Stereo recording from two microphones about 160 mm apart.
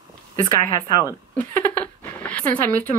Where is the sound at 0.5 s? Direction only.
25° left (ahead or behind).